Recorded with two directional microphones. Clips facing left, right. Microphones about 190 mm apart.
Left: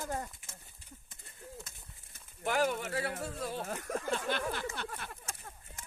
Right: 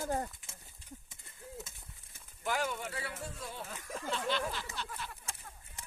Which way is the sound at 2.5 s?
60° left (ahead or behind).